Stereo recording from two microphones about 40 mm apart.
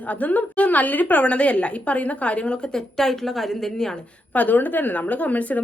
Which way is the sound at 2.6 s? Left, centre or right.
Centre.